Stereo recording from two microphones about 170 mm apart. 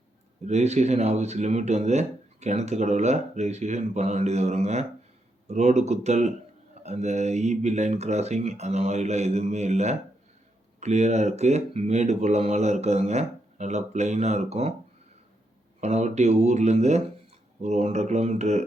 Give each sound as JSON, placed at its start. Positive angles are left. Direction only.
{"t": 0.4, "sound": "speech", "side_deg": -40}
{"t": 15.8, "sound": "speech", "side_deg": -40}